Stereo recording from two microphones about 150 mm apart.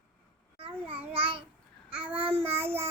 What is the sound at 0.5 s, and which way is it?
Babbling, 40° right (ahead or behind).